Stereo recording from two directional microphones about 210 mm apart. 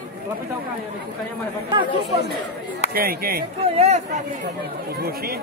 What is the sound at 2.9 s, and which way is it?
Speech, 45° right (ahead or behind).